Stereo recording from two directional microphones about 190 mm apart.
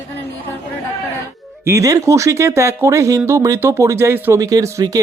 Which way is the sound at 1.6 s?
15° right (ahead or behind).